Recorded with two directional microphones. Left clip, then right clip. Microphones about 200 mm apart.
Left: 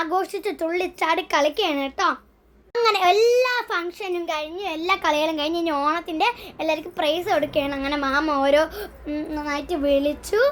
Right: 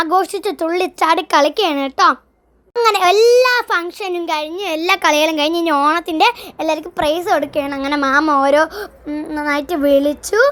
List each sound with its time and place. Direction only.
0.0 s a child's voice: 40° right (ahead or behind)
7.8 s a child's voice: 45° right (ahead or behind)